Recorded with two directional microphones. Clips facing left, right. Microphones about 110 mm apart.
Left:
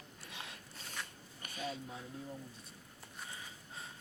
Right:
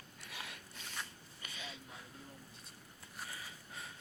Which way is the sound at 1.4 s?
45° left (ahead or behind).